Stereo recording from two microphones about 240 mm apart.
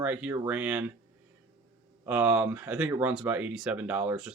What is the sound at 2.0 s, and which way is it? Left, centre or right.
Speech, centre.